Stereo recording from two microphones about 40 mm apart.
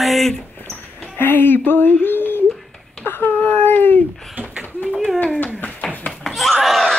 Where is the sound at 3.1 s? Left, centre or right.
Left.